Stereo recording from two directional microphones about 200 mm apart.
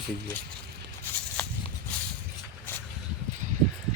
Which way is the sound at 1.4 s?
5° left (ahead or behind).